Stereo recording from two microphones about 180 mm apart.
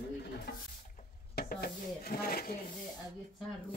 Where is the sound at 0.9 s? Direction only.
50° left (ahead or behind).